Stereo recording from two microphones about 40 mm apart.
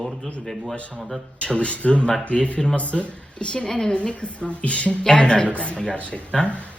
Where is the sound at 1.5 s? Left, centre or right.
Left.